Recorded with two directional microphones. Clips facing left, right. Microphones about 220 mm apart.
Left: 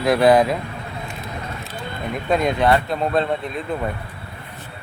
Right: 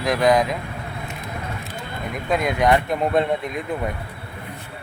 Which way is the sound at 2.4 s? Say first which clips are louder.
Right 1 dB; 15° right (ahead or behind).